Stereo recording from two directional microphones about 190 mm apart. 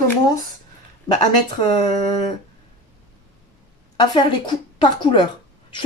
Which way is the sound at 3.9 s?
25° left (ahead or behind).